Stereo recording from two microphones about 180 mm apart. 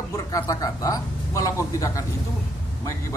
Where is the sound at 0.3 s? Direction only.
20° left (ahead or behind).